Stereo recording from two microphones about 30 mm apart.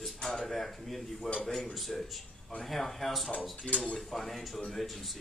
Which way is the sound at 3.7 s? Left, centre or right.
Left.